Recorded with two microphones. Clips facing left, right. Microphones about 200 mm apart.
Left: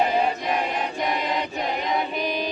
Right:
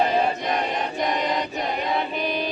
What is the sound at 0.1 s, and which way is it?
Choir, 10° left (ahead or behind).